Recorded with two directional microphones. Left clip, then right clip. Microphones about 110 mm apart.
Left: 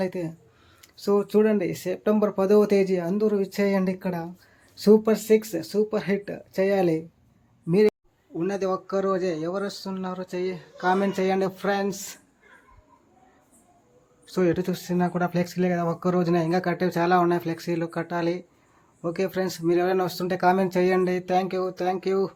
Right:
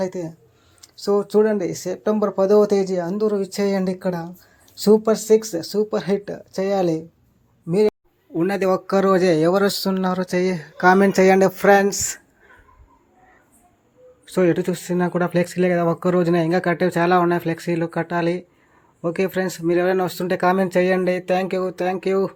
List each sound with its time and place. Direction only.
0.0 s speech: centre (ahead or behind)
8.4 s speech: 70° right (ahead or behind)
10.2 s speech: 90° right; by 12.2 s 65° right (ahead or behind)
14.3 s speech: 30° right (ahead or behind)